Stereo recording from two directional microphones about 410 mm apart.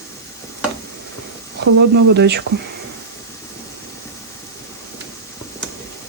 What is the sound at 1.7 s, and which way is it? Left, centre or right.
Speech, right.